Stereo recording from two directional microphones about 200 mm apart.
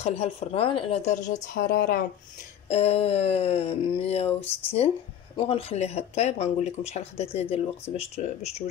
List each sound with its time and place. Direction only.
0.0 s speech: 30° left (ahead or behind)
1.5 s a woman's voice: 50° left (ahead or behind)
2.7 s speech: 30° left (ahead or behind)